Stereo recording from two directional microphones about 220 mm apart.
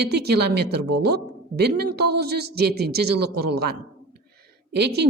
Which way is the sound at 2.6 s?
45° right (ahead or behind).